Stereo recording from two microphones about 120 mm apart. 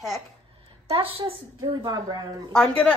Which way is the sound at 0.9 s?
50° right (ahead or behind).